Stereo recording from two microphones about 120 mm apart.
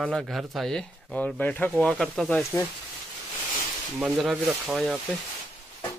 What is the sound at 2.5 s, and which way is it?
Speech, 20° left (ahead or behind).